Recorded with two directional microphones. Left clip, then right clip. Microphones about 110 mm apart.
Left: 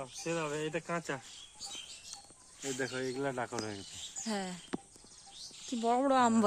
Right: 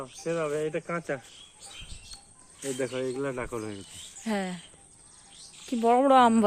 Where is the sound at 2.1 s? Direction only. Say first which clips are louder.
Right 2 dB; 15° right (ahead or behind).